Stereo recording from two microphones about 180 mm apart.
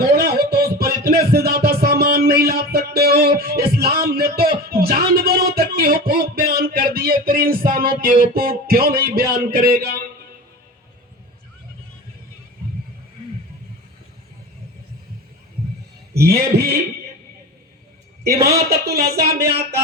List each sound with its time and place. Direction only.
0.2 s music: 60° right (ahead or behind)
16.1 s a man's voice: 60° right (ahead or behind)
18.4 s a man's voice: 60° right (ahead or behind)